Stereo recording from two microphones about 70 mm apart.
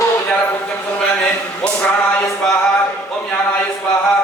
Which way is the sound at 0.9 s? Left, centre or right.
Centre.